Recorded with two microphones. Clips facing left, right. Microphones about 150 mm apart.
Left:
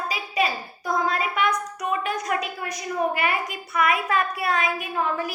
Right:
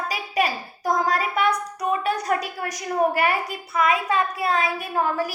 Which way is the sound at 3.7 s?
25° right (ahead or behind).